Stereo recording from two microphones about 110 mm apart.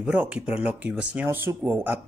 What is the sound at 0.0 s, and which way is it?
Speech, 10° right (ahead or behind).